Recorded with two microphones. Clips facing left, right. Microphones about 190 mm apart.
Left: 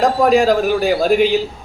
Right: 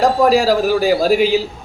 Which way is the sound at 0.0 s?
Centre (ahead or behind).